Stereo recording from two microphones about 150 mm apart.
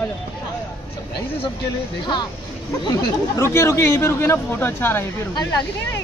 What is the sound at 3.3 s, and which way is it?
Speech, 20° left (ahead or behind).